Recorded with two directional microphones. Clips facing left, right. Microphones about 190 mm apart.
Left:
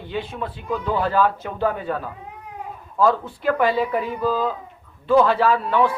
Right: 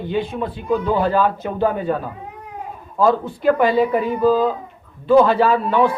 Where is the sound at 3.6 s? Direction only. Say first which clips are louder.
Right 4 dB; 45° right (ahead or behind).